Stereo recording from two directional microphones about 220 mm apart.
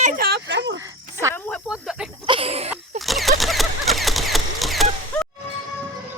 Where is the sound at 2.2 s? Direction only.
25° right (ahead or behind).